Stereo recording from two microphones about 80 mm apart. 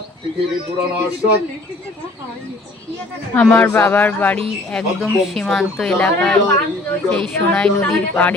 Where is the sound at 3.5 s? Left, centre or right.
Left.